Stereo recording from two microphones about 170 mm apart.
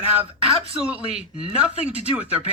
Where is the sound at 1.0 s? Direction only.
35° right (ahead or behind).